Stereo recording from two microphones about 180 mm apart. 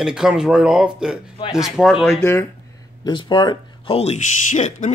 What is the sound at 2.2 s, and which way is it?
Speech, 15° left (ahead or behind).